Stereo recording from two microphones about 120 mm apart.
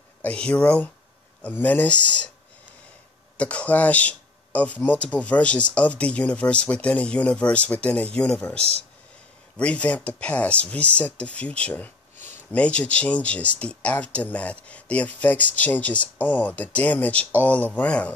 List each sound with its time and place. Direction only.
0.2 s speech: 10° left (ahead or behind)
3.3 s speech: 10° left (ahead or behind)